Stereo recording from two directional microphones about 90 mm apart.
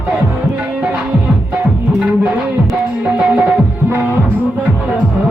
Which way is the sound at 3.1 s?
10° right (ahead or behind).